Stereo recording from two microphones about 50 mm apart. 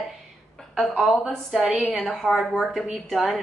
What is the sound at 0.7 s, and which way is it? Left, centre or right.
A woman's voice, centre.